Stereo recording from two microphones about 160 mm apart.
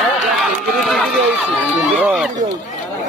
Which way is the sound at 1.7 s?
10° right (ahead or behind).